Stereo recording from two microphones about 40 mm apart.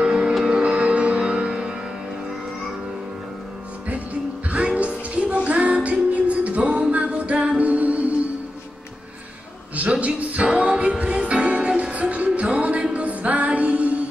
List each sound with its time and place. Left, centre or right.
0.0 s music: centre
3.9 s music: right
9.8 s a sound: right
10.5 s music: right